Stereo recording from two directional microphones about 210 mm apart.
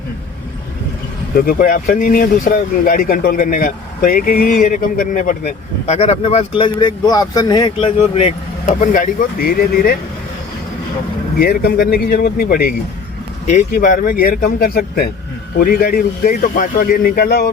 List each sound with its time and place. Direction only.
1.4 s speech: 45° left (ahead or behind)
8.8 s speech: 40° left (ahead or behind)
11.3 s speech: 45° left (ahead or behind)